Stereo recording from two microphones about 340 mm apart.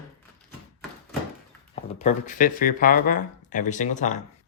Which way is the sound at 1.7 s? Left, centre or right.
Centre.